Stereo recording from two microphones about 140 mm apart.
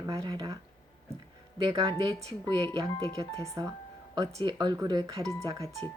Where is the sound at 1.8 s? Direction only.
30° right (ahead or behind).